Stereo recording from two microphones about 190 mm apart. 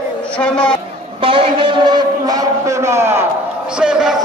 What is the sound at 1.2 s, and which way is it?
A man's voice, 30° right (ahead or behind).